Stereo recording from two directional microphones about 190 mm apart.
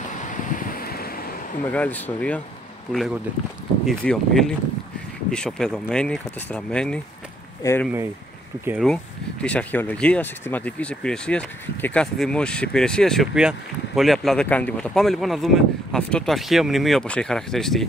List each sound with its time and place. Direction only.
0.6 s vehicle: 50° left (ahead or behind)
1.6 s speech: 10° left (ahead or behind)
3.8 s speech: 5° left (ahead or behind)